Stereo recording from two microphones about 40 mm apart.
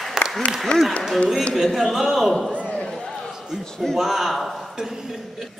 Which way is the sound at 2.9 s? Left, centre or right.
Centre.